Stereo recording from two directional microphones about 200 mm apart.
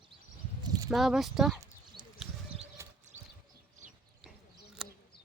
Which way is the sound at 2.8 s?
15° right (ahead or behind).